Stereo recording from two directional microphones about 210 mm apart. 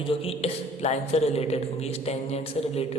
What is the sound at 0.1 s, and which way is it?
Speech, 25° left (ahead or behind).